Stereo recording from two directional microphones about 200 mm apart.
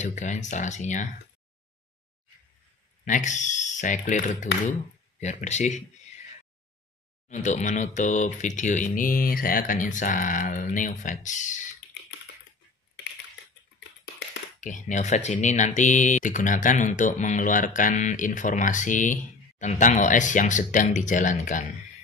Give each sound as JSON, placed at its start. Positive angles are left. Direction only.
{"t": 0.0, "sound": "speech", "side_deg": 35}
{"t": 3.1, "sound": "speech", "side_deg": 35}
{"t": 7.2, "sound": "speech", "side_deg": 35}
{"t": 14.6, "sound": "speech", "side_deg": 40}